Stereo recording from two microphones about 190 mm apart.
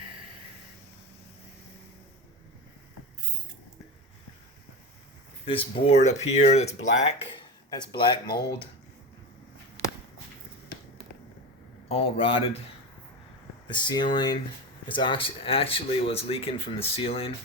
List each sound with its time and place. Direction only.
5.5 s speech: 30° left (ahead or behind)
7.3 s speech: 25° left (ahead or behind)
11.9 s speech: 30° left (ahead or behind)
13.7 s speech: 25° left (ahead or behind)